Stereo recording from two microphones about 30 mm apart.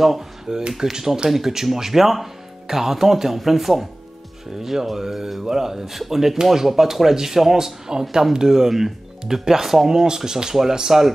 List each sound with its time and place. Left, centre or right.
0.5 s speech: right